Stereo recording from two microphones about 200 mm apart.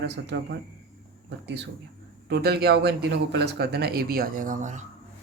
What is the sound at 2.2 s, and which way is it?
Speech, 55° right (ahead or behind).